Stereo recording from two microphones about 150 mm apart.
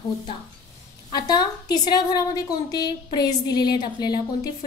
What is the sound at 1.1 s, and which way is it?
A woman's voice, 25° left (ahead or behind).